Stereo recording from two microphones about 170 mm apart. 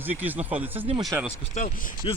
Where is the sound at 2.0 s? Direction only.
30° left (ahead or behind).